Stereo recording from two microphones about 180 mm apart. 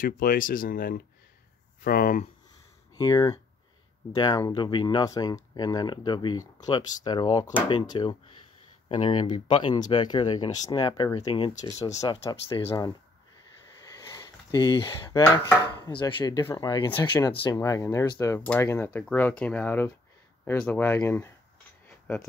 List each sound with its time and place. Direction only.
0.0 s speech: 50° left (ahead or behind)
3.0 s speech: 20° left (ahead or behind)
13.9 s a sound: 20° left (ahead or behind)
15.7 s speech: 25° left (ahead or behind)
17.6 s speech: 15° left (ahead or behind)
21.8 s mechanisms: 10° left (ahead or behind)